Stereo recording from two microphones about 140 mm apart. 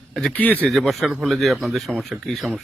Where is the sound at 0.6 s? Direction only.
Centre (ahead or behind).